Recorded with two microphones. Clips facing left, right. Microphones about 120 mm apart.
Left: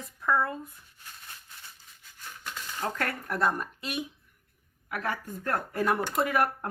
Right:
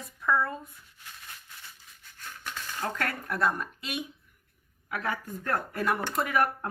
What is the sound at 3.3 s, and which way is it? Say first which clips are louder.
Speech: even; 25° left (ahead or behind).